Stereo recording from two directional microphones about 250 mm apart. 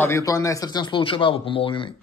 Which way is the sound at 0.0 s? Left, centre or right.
Centre.